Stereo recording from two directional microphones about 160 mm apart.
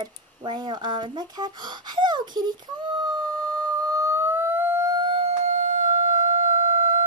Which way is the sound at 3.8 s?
20° right (ahead or behind).